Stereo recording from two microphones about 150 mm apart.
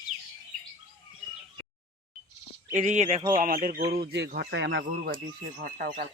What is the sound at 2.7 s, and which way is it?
Speech, 55° right (ahead or behind).